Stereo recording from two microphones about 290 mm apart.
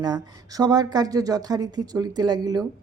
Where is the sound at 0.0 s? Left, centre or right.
Centre.